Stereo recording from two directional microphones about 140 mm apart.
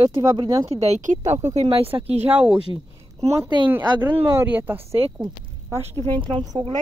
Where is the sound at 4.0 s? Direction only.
15° right (ahead or behind).